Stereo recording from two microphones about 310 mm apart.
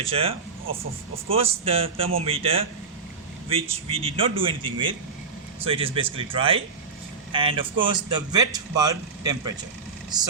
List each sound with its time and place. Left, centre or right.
0.1 s a man's voice: centre